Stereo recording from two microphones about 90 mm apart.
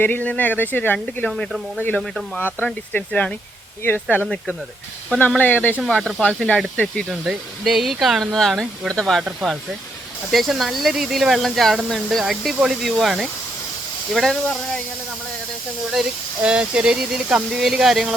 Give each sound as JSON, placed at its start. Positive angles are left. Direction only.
{"t": 0.0, "sound": "speech", "side_deg": 20}
{"t": 0.9, "sound": "speech", "side_deg": 5}
{"t": 5.4, "sound": "speech", "side_deg": 20}
{"t": 6.0, "sound": "speech", "side_deg": 10}
{"t": 7.1, "sound": "speech", "side_deg": -5}
{"t": 9.2, "sound": "speech", "side_deg": -5}
{"t": 16.0, "sound": "speech", "side_deg": -10}